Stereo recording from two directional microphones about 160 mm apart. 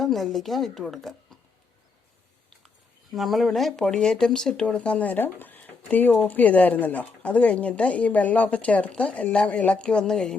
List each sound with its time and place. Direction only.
0.0 s a woman's voice: centre (ahead or behind)
2.6 s speech: centre (ahead or behind)